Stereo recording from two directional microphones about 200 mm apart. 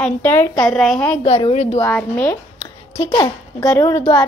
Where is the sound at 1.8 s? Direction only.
10° left (ahead or behind).